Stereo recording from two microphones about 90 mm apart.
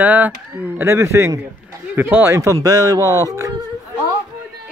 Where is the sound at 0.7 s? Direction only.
30° right (ahead or behind).